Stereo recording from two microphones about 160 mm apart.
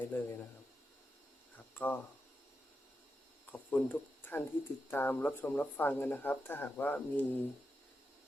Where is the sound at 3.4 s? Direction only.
10° left (ahead or behind).